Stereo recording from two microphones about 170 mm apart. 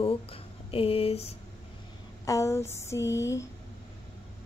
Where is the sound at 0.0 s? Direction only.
35° left (ahead or behind).